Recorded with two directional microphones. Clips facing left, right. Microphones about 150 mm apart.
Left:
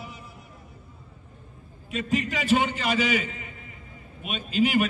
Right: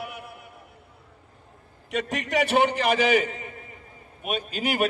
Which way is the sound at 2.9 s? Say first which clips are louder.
Right 4 dB; 50° right (ahead or behind).